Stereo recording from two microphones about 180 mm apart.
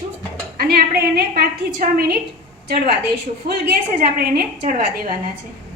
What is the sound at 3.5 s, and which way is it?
A woman's voice, 60° right (ahead or behind).